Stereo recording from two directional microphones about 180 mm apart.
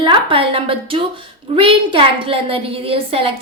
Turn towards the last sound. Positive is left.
turn(degrees=-30)  # may be behind; listen again after turning